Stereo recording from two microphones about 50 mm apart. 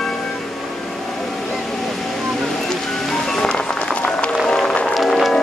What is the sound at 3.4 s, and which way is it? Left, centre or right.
Run, centre.